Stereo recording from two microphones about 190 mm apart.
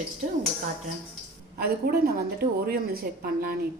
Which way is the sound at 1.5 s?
55° right (ahead or behind).